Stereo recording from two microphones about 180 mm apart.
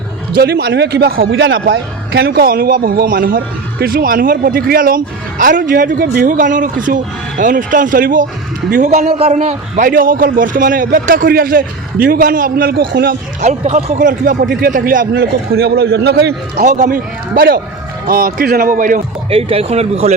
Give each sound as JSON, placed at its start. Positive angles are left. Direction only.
{"t": 0.3, "sound": "speech", "side_deg": -65}
{"t": 9.0, "sound": "a man's voice", "side_deg": -35}
{"t": 13.4, "sound": "speech", "side_deg": -40}
{"t": 14.4, "sound": "speech", "side_deg": -90}
{"t": 14.8, "sound": "a man's voice", "side_deg": -60}
{"t": 16.6, "sound": "speech", "side_deg": -45}
{"t": 19.3, "sound": "speech", "side_deg": -35}